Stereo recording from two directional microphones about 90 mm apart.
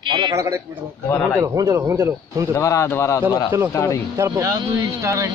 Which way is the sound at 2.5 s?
35° left (ahead or behind).